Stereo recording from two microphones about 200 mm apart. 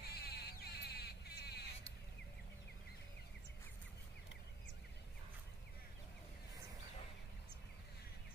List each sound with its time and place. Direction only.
0.0 s music: 55° left (ahead or behind)